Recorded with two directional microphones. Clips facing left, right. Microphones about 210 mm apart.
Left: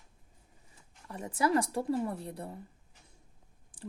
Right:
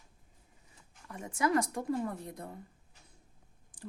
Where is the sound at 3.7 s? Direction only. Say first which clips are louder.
Left 2 dB; 30° left (ahead or behind).